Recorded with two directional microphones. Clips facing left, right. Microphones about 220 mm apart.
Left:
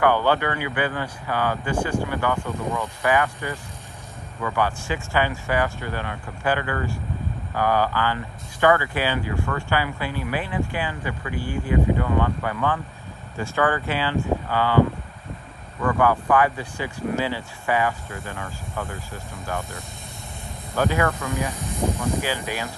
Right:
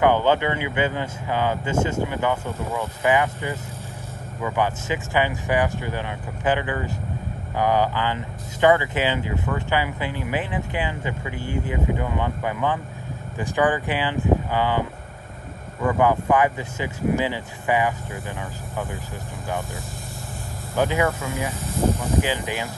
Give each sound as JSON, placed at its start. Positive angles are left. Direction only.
{"t": 0.0, "sound": "speech", "side_deg": -20}
{"t": 20.7, "sound": "speech", "side_deg": -15}
{"t": 21.1, "sound": "speech", "side_deg": 0}
{"t": 22.2, "sound": "speech", "side_deg": -15}